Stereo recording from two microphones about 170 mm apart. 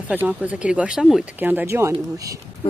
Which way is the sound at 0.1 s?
10° right (ahead or behind).